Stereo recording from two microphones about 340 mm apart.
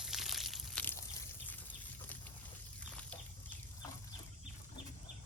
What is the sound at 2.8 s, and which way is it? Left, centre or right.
Bird flight, centre.